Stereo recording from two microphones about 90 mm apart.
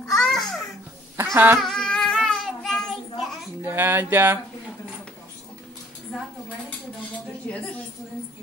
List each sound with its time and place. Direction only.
0.0 s babbling: 5° left (ahead or behind)
1.1 s speech: 25° right (ahead or behind)
1.6 s child singing: 5° left (ahead or behind)
3.6 s speech: 25° right (ahead or behind)
7.5 s a woman's voice: 15° left (ahead or behind)